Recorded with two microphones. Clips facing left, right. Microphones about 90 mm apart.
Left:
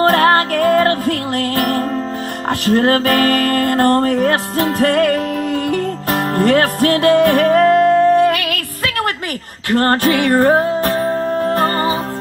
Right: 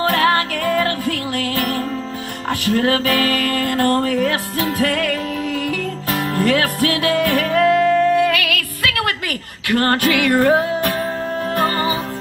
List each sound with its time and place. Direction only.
0.1 s music: 40° left (ahead or behind)